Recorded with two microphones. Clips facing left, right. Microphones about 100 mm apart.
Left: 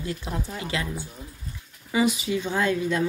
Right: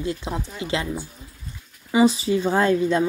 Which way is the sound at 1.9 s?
30° right (ahead or behind).